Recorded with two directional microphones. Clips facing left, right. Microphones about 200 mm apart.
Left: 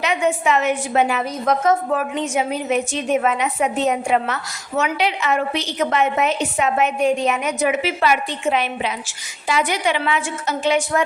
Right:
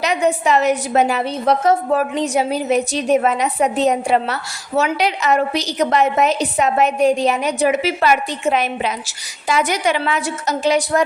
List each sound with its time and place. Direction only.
0.0 s a woman's voice: 40° right (ahead or behind)